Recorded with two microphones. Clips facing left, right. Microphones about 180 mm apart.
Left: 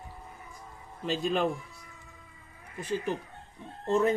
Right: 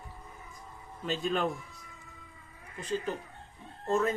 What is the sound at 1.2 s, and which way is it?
Speech, centre (ahead or behind).